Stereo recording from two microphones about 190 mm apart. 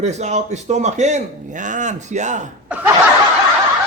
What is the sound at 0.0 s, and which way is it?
A man's voice, 35° right (ahead or behind).